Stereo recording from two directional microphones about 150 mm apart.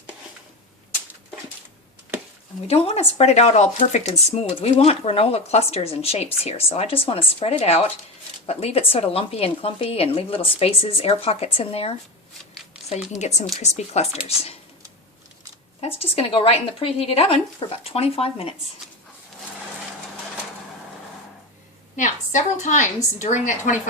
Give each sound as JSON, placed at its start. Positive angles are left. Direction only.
{"t": 2.6, "sound": "speech", "side_deg": 45}
{"t": 13.1, "sound": "speech", "side_deg": 50}
{"t": 16.0, "sound": "speech", "side_deg": 40}
{"t": 21.9, "sound": "a woman's voice", "side_deg": 55}